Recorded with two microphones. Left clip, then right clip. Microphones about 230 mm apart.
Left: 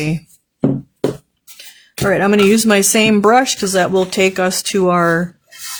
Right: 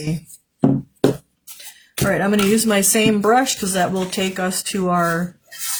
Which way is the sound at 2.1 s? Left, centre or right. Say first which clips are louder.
Left 6 dB; left.